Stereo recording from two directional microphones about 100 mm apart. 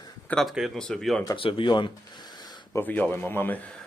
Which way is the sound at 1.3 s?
60° left (ahead or behind).